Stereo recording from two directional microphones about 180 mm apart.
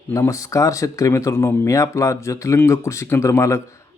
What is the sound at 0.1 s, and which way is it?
Speech, 15° left (ahead or behind).